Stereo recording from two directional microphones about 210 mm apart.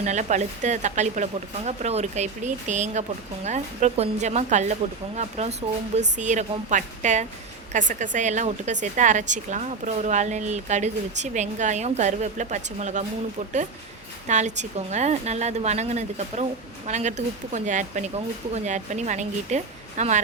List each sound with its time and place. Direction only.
0.0 s a woman's voice: 35° right (ahead or behind)
14.3 s a woman's voice: 35° right (ahead or behind)